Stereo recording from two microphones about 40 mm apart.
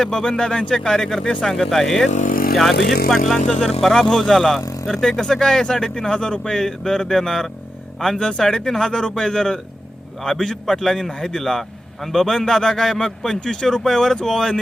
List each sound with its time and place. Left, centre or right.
0.0 s speech: centre